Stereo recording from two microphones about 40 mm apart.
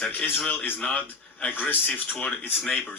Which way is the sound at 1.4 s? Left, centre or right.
Left.